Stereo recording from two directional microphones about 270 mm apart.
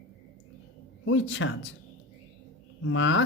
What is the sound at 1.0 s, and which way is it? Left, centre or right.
Speech, left.